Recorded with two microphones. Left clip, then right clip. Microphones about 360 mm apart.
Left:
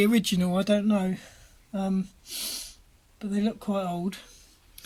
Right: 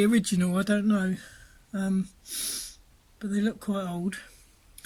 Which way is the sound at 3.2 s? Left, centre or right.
Left.